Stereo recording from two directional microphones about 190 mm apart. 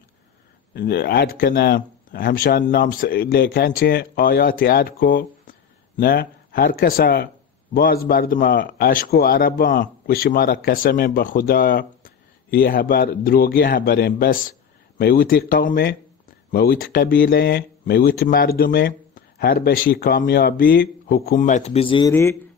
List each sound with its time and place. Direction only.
0.7 s a man's voice: 55° left (ahead or behind); by 22.1 s 25° left (ahead or behind)
22.1 s speech: 15° left (ahead or behind)